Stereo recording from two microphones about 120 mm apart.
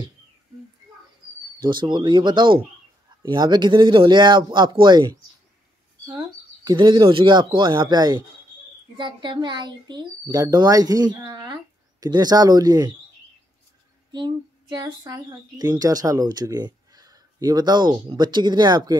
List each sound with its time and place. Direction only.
1.6 s speech: 40° right (ahead or behind)
6.1 s a sound: 35° right (ahead or behind)
7.1 s speech: 45° right (ahead or behind)
14.1 s speech: 35° right (ahead or behind)